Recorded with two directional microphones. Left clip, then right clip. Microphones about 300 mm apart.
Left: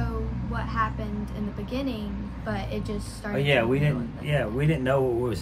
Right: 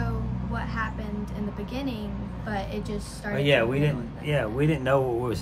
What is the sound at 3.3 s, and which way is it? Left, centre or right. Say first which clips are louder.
Speech: right 1 dB; centre.